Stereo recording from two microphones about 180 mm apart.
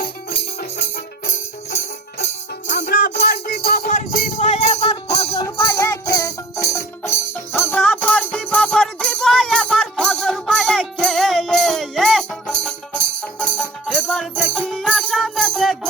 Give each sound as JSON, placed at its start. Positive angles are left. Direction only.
{"t": 0.0, "sound": "music", "side_deg": 60}
{"t": 2.7, "sound": "music", "side_deg": 55}
{"t": 3.8, "sound": "music", "side_deg": 45}
{"t": 5.5, "sound": "music", "side_deg": 20}